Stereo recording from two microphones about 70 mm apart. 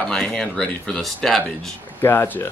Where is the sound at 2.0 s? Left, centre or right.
Left.